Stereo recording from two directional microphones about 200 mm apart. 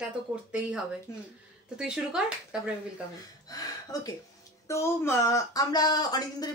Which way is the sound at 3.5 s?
20° left (ahead or behind).